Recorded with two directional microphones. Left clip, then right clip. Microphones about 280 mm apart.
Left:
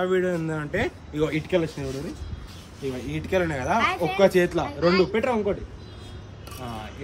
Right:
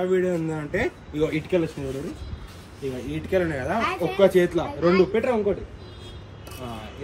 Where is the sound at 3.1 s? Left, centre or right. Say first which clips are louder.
Right 1 dB; left.